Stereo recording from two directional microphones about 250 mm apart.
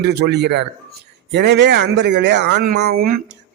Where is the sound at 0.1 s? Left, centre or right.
Right.